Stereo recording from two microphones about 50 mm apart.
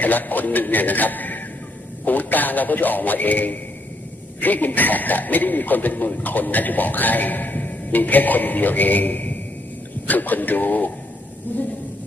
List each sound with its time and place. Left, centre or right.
0.0 s a man's voice: left